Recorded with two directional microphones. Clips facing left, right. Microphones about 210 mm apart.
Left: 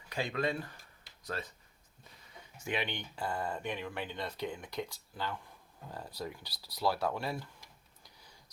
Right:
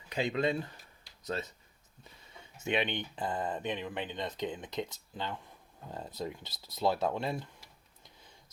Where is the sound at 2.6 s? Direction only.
20° right (ahead or behind).